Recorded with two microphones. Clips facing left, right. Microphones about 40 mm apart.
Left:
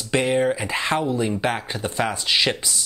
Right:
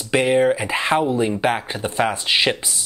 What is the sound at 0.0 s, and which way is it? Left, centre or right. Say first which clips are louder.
Speech: right 3 dB; centre.